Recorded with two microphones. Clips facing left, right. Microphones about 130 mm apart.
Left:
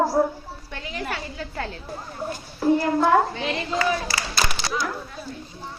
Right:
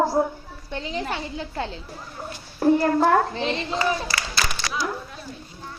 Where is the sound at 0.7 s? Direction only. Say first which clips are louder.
Right 3 dB; 25° right (ahead or behind).